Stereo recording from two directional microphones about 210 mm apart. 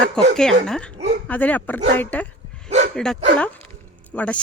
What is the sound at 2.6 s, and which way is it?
Bow-wow, 30° right (ahead or behind).